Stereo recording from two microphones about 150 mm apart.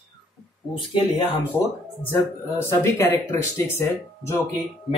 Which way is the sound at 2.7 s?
20° left (ahead or behind).